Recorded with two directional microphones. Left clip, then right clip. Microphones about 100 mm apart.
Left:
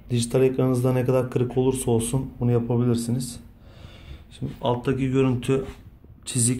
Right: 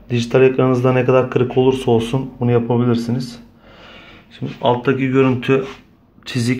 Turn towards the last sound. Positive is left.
turn(degrees=10)  # may be behind; listen again after turning